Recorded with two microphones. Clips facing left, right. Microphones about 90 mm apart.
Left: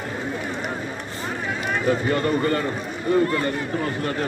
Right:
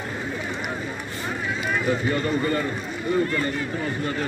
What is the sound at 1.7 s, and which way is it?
Speech, 50° left (ahead or behind).